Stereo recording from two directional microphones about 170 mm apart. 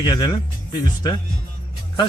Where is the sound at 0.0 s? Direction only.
25° left (ahead or behind).